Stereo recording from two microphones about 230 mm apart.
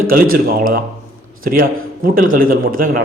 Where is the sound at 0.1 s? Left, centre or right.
Right.